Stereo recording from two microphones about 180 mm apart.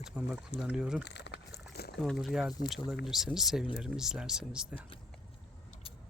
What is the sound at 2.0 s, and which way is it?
Speech, centre (ahead or behind).